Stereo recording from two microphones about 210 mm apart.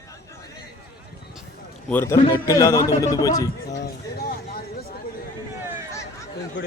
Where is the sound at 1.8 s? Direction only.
10° left (ahead or behind).